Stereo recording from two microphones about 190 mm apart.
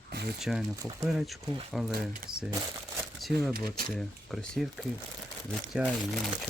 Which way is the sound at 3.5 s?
50° right (ahead or behind).